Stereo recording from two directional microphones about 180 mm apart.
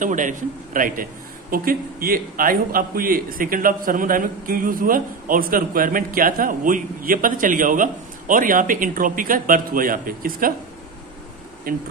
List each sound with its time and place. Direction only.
0.0 s a man's voice: 45° right (ahead or behind)
11.7 s speech: 55° right (ahead or behind)